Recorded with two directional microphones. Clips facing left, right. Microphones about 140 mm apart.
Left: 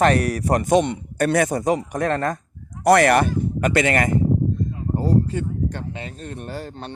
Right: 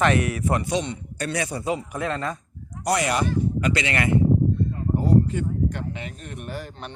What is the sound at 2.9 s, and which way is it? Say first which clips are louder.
Speech: left 8 dB; 60° left (ahead or behind).